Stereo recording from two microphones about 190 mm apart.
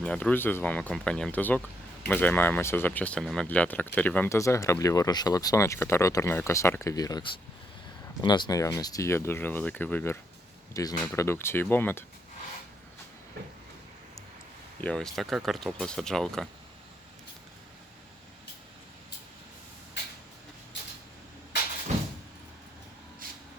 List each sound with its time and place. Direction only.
0.0 s speech: 5° left (ahead or behind)
14.8 s speech: 5° left (ahead or behind)
21.9 s vehicle: 35° right (ahead or behind)
23.2 s a sound: 50° right (ahead or behind)